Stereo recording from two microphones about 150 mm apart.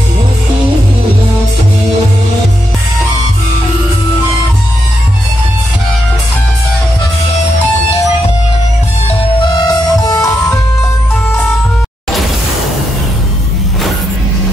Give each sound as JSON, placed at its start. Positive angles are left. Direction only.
{"t": 9.6, "sound": "music", "side_deg": 25}